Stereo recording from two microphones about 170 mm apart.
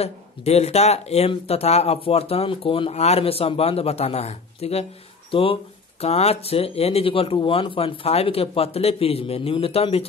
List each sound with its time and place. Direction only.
0.0 s speech: 40° left (ahead or behind)